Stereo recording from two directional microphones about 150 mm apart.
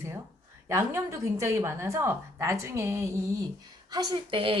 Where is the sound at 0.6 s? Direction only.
20° right (ahead or behind).